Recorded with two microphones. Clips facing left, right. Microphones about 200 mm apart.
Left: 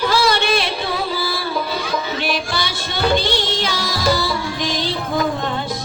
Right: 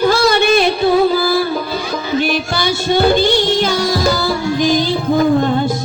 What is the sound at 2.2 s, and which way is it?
Music, 45° right (ahead or behind).